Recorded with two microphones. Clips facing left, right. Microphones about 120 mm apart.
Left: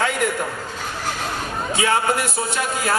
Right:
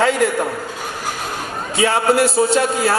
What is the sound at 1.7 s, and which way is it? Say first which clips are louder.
A man's voice: right 5 dB; 30° right (ahead or behind).